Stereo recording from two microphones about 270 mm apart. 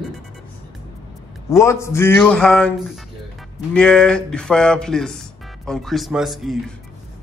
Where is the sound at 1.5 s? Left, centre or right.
Centre.